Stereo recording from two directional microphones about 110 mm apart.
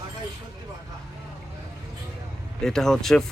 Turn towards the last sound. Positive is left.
turn(degrees=5)  # may be behind; listen again after turning